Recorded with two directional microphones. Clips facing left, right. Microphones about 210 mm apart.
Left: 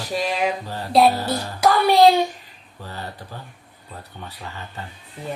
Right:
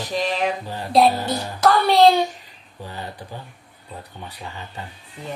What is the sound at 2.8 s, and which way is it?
Speech, 15° right (ahead or behind).